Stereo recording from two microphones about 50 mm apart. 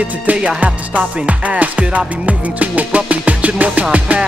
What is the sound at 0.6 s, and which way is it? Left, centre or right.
Music, right.